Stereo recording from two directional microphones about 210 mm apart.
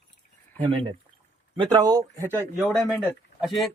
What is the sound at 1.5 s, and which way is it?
Speech, 25° right (ahead or behind).